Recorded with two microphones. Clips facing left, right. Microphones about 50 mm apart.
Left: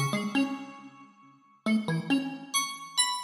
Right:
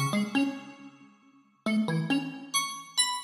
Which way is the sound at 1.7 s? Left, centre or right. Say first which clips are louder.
Even; centre.